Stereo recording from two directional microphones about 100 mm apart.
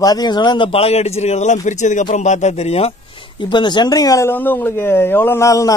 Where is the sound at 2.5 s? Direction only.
90° left.